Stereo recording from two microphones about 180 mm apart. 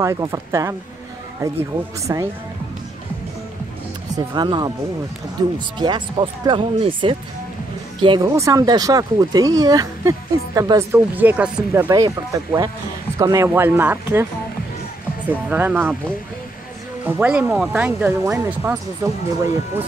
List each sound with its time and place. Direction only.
0.0 s speech: 20° right (ahead or behind)
2.1 s speech: 20° right (ahead or behind)
4.1 s speech: 25° right (ahead or behind)
11.9 s speech: 20° right (ahead or behind)
15.2 s speech: 10° right (ahead or behind)
17.0 s speech: 10° right (ahead or behind)